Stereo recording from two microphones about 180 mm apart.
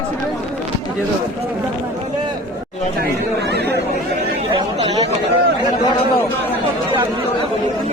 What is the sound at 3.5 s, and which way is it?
Chatter, 65° right (ahead or behind).